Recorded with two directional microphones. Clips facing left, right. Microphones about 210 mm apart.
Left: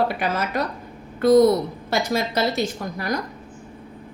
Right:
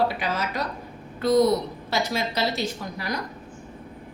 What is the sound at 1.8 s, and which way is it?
A woman's voice, 50° left (ahead or behind).